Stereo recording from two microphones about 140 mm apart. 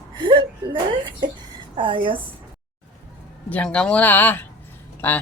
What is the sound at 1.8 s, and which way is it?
Speech, 35° right (ahead or behind).